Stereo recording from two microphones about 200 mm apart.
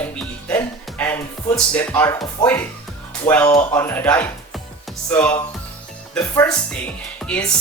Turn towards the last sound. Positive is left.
turn(degrees=5)  # may be behind; listen again after turning